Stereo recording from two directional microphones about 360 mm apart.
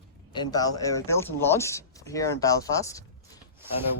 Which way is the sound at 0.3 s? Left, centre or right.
Centre.